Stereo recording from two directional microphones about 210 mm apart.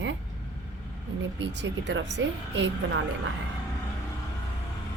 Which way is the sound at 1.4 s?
60° right (ahead or behind).